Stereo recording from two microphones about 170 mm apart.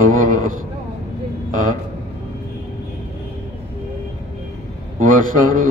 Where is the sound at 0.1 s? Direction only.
50° right (ahead or behind).